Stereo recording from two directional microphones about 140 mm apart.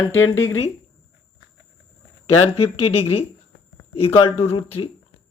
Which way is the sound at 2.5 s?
45° left (ahead or behind).